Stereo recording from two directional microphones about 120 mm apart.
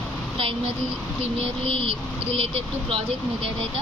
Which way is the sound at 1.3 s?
50° right (ahead or behind).